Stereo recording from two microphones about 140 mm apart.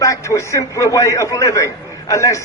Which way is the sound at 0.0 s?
20° left (ahead or behind).